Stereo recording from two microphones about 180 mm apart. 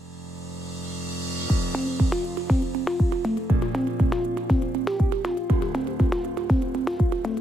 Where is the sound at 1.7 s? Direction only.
Centre (ahead or behind).